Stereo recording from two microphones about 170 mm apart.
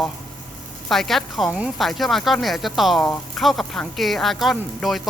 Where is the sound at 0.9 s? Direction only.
Centre (ahead or behind).